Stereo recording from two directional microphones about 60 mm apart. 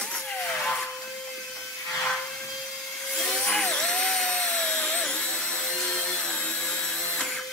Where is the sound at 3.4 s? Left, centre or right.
Centre.